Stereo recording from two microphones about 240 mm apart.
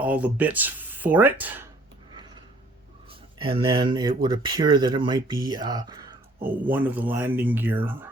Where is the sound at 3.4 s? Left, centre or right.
Right.